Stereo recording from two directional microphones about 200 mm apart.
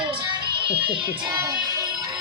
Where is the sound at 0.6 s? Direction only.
25° right (ahead or behind).